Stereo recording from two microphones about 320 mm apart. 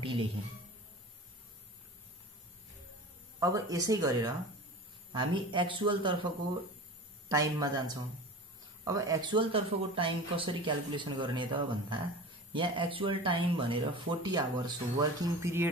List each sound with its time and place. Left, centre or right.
0.0 s speech: centre
3.3 s speech: centre
7.2 s speech: centre